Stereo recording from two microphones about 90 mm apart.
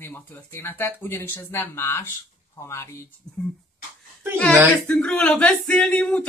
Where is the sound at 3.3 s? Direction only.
45° left (ahead or behind).